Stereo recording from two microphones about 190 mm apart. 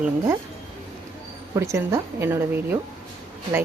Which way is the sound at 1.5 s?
15° right (ahead or behind).